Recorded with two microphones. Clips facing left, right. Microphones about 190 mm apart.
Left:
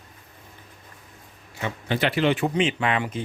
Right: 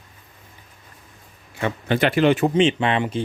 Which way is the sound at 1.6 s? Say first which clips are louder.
Right 5 dB; 55° right (ahead or behind).